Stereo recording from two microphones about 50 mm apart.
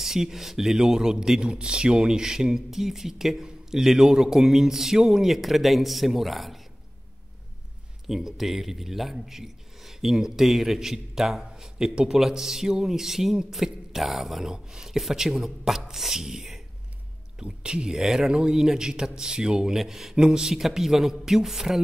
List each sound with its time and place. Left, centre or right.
0.0 s a man's voice: centre
8.1 s a man's voice: centre
17.4 s speech: centre
17.9 s a man's voice: centre
19.8 s a man's voice: centre